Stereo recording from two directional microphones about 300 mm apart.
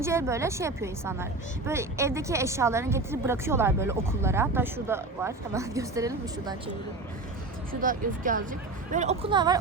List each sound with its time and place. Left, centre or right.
0.0 s a woman's voice: centre
7.7 s a woman's voice: right